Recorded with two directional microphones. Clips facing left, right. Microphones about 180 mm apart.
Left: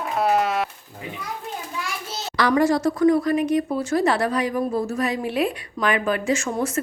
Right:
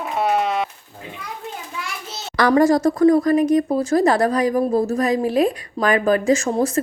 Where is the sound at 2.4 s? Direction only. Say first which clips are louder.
Right 4 dB; 45° right (ahead or behind).